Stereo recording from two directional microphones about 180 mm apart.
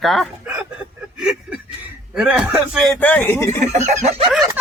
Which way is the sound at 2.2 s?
5° right (ahead or behind).